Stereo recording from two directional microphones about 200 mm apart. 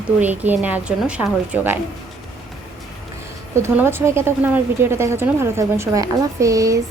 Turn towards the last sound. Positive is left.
turn(degrees=-15)  # may be behind; listen again after turning